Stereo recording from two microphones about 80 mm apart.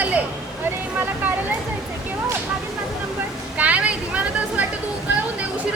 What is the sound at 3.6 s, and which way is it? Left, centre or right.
Vehicle, centre.